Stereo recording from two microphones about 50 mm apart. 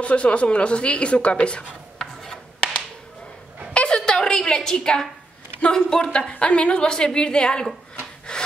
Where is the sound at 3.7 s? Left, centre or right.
Left.